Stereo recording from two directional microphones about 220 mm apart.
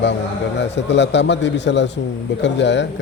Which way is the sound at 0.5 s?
50° left (ahead or behind).